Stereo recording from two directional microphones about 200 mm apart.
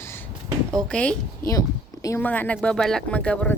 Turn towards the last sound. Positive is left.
turn(degrees=5)  # may be behind; listen again after turning